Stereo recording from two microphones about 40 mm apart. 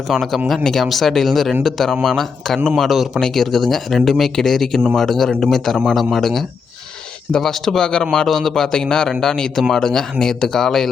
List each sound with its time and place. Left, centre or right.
0.1 s speech: centre
3.2 s speech: centre
7.8 s speech: centre
8.1 s speech: centre